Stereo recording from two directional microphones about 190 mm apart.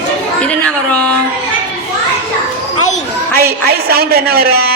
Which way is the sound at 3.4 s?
55° right (ahead or behind).